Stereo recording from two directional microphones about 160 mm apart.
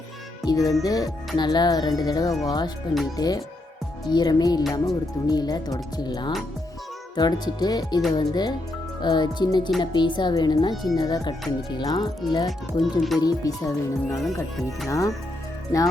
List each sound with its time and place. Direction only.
0.4 s speech: 20° left (ahead or behind)
12.5 s speech: centre (ahead or behind)
13.2 s speech: 20° left (ahead or behind)